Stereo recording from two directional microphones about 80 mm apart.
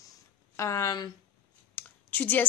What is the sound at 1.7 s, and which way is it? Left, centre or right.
Clicking, left.